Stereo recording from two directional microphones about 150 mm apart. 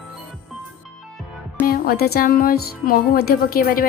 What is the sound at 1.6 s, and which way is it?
Speech, 85° left.